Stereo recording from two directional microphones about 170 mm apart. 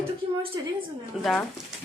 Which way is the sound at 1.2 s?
Centre (ahead or behind).